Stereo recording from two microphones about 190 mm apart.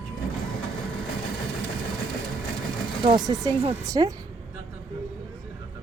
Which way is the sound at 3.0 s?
20° right (ahead or behind).